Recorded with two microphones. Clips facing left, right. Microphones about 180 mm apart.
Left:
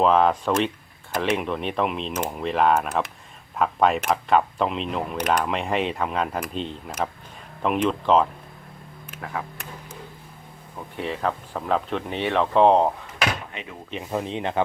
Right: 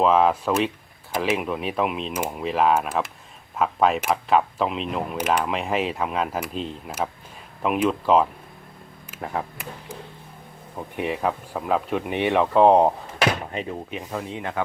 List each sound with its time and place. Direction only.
0.0 s speech: centre (ahead or behind)
10.8 s speech: 15° right (ahead or behind)
13.5 s speech: 40° right (ahead or behind)
14.1 s speech: 20° left (ahead or behind)